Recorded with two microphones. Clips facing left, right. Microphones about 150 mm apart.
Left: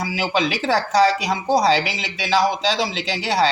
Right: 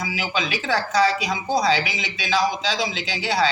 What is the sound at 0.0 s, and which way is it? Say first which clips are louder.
A man's voice: left 5 dB; 35° left (ahead or behind).